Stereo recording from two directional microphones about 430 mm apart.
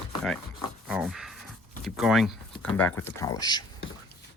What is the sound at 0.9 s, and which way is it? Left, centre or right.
Speech, centre.